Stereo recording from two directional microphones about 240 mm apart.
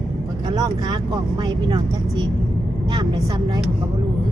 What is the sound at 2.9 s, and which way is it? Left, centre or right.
Speech, centre.